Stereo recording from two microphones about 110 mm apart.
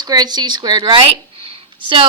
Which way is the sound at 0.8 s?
45° right (ahead or behind).